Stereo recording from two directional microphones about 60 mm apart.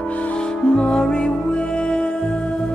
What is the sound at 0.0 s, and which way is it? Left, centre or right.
Music, left.